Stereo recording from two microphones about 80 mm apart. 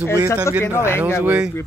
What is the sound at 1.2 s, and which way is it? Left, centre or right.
Speech, centre.